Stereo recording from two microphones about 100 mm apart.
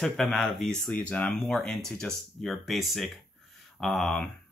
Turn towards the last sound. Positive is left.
turn(degrees=10)  # may be behind; listen again after turning